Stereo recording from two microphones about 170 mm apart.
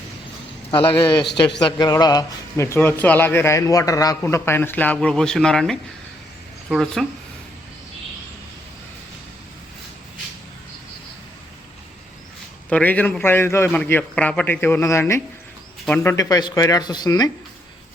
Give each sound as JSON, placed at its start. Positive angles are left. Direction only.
{"t": 0.7, "sound": "speech", "side_deg": 30}
{"t": 12.7, "sound": "speech", "side_deg": 10}